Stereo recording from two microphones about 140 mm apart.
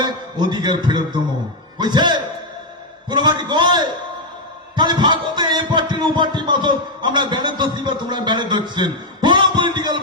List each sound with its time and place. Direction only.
0.0 s a man's voice: 30° right (ahead or behind)
3.1 s a sound: 35° right (ahead or behind)
4.7 s heart murmur: 35° right (ahead or behind)